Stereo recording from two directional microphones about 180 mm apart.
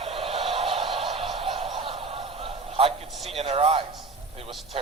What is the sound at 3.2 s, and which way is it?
Speech, 35° right (ahead or behind).